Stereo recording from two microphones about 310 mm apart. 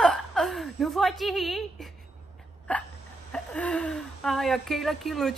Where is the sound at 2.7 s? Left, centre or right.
Centre.